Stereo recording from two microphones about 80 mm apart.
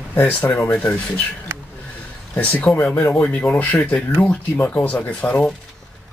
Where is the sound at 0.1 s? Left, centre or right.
Left.